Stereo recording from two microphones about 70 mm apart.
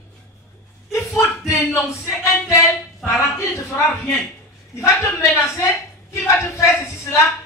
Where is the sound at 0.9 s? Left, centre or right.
Left.